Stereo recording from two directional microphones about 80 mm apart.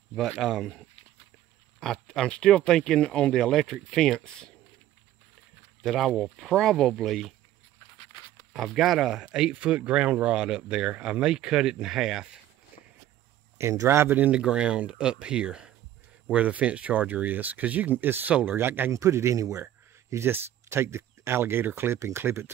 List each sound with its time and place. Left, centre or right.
0.3 s speech: centre
1.8 s speech: centre
5.8 s speech: centre
8.5 s speech: centre
13.6 s speech: right
14.4 s speech: centre; by 19.6 s right
20.1 s speech: right